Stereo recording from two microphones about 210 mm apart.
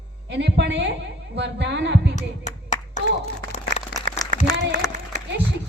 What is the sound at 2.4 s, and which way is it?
Clapping, 35° left (ahead or behind).